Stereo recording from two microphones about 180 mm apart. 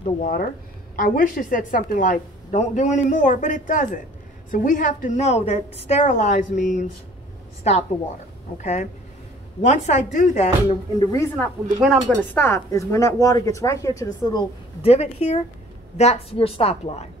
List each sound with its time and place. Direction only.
0.0 s a woman's voice: 50° left (ahead or behind)
11.0 s a woman's voice: 20° left (ahead or behind)
11.3 s speech: 5° left (ahead or behind)
12.4 s speech: 15° left (ahead or behind)
14.8 s a woman's voice: 35° left (ahead or behind)